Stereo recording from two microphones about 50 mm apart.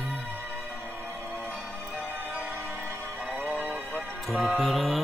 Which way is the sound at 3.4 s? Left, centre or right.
Right.